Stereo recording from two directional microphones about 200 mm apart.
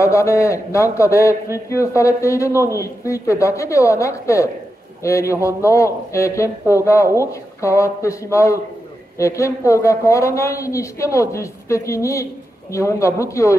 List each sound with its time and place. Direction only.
0.0 s speech: 15° left (ahead or behind)